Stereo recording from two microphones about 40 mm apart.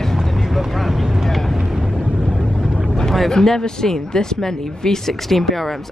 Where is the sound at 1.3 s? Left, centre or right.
Centre.